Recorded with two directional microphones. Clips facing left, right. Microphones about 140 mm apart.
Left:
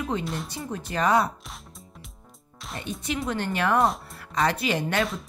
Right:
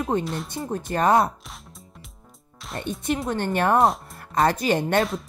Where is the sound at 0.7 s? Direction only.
50° right (ahead or behind).